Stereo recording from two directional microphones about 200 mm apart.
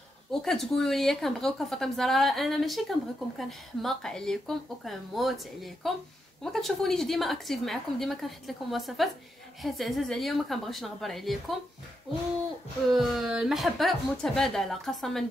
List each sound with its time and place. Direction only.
0.3 s a woman's voice: centre (ahead or behind)
12.9 s a woman's voice: centre (ahead or behind)